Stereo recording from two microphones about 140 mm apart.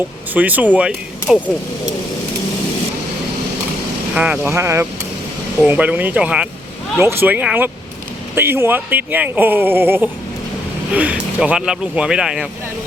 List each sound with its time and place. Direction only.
0.3 s speech: 10° right (ahead or behind)
4.1 s speech: 10° right (ahead or behind)